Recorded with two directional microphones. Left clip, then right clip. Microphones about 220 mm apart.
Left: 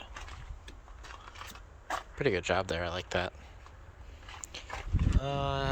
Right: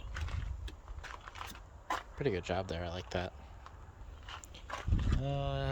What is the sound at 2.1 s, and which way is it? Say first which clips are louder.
Speech: left 8 dB; 5° right (ahead or behind).